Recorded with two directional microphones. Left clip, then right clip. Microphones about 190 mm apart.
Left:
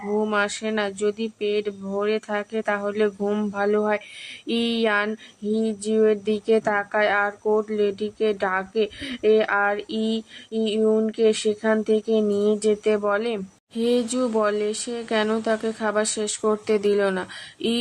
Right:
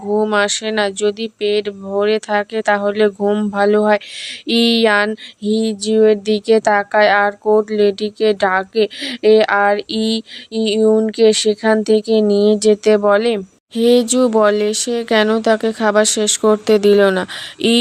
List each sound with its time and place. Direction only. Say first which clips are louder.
0.2 s speech: right 8 dB; 40° right (ahead or behind)
4.4 s mantra: right 9 dB; 45° right (ahead or behind)